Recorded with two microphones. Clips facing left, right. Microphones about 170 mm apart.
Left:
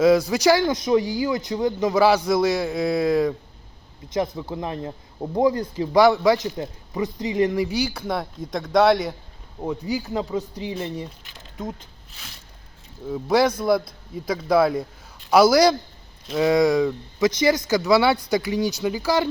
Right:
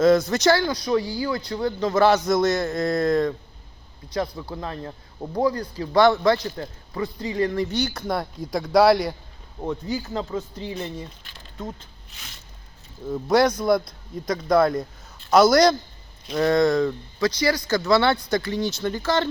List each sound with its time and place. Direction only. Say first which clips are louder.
0.0 s speech: left 1 dB; 10° left (ahead or behind)
4.0 s speech: left 2 dB; 20° left (ahead or behind)
13.1 s speech: even; 5° left (ahead or behind)